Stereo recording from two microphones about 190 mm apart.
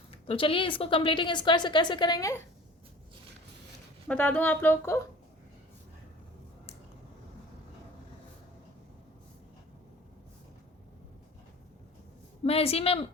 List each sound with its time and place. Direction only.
0.3 s a woman's voice: 30° left (ahead or behind)
4.1 s speech: 10° left (ahead or behind)
12.5 s a woman's voice: 30° left (ahead or behind)